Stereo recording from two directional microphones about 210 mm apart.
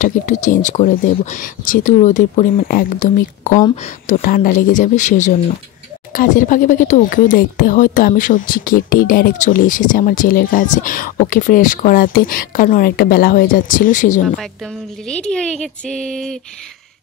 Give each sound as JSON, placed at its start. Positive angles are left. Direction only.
{"t": 0.0, "sound": "speech", "side_deg": 35}
{"t": 14.4, "sound": "a woman's voice", "side_deg": 5}